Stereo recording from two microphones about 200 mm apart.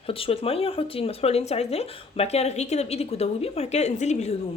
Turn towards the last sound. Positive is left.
turn(degrees=35)  # may be behind; listen again after turning